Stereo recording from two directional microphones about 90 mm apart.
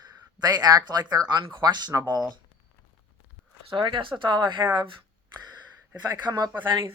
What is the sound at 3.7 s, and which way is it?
Speech, 65° right (ahead or behind).